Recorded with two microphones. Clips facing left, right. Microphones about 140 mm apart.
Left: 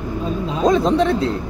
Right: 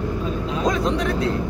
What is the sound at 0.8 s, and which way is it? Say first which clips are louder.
Speech: left 5 dB; 30° left (ahead or behind).